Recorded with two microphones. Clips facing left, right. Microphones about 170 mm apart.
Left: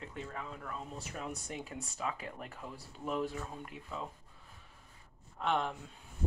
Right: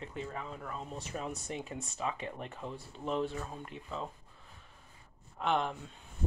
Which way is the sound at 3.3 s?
5° left (ahead or behind).